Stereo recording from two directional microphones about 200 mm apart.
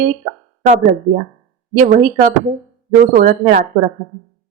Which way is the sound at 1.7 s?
40° right (ahead or behind).